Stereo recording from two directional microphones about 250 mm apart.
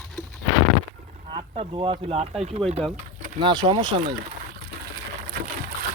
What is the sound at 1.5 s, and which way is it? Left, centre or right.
Speech, right.